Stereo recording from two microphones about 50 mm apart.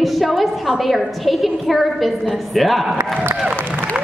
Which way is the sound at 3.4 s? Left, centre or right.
Centre.